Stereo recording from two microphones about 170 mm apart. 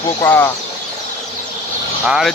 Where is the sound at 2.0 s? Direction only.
5° right (ahead or behind).